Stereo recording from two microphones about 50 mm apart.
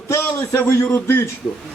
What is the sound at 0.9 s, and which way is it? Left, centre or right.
Speech, left.